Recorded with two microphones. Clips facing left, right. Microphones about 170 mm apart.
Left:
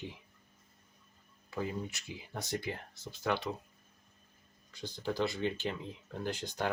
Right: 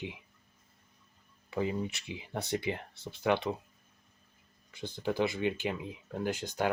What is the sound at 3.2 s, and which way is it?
Speech, 20° right (ahead or behind).